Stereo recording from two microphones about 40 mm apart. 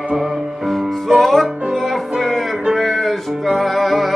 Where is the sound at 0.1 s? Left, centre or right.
Centre.